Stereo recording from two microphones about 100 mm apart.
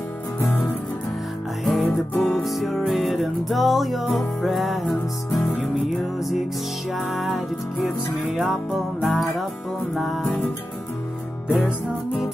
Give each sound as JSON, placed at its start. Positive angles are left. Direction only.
{"t": 1.6, "sound": "music", "side_deg": 0}